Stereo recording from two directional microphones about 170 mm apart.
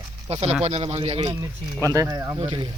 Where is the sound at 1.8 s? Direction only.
20° right (ahead or behind).